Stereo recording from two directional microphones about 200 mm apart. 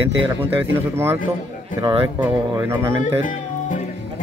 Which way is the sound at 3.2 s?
40° left (ahead or behind).